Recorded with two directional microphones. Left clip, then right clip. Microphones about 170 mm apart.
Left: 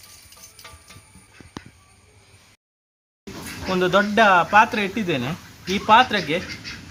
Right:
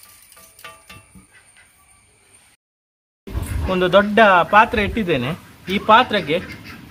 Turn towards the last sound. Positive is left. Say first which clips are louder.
# right 2 dB
turn(degrees=-15)  # may be behind; listen again after turning